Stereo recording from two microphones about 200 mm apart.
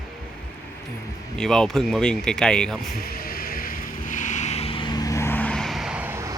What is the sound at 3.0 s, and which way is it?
Vehicle, 50° left (ahead or behind).